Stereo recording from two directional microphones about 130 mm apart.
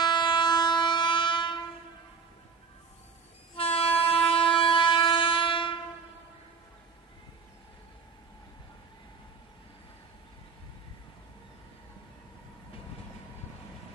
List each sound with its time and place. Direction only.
0.0 s train: 35° left (ahead or behind)
3.5 s train: 50° left (ahead or behind)